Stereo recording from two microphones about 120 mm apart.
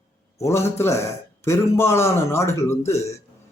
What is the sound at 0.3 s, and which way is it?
Speech, 25° left (ahead or behind).